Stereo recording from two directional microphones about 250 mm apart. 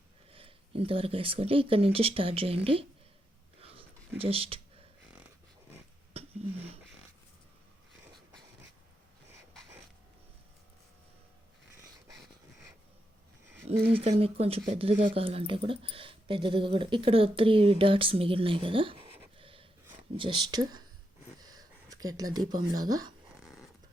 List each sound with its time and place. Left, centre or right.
0.3 s speech: right
3.6 s a sound: right
4.2 s speech: right
13.7 s speech: right
19.4 s snort: right
20.1 s speech: centre
21.4 s a sound: centre
22.8 s speech: centre
23.4 s snoring: centre